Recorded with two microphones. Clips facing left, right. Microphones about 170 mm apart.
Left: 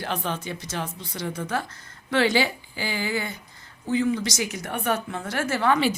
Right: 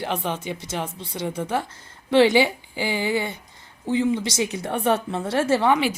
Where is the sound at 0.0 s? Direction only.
20° right (ahead or behind).